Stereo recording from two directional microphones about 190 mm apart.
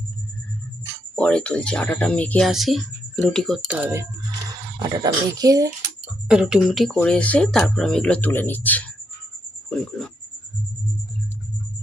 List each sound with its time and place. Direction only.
1.1 s speech: 5° left (ahead or behind)
4.4 s speech: 20° right (ahead or behind)
6.2 s speech: 5° right (ahead or behind)